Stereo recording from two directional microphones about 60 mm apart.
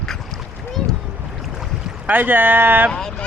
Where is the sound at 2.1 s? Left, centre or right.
Right.